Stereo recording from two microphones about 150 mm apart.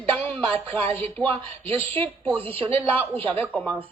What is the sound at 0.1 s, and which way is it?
Music, 5° left (ahead or behind).